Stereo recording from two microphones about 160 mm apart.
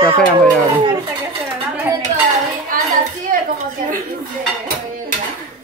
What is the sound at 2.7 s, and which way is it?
Hands, 60° right (ahead or behind).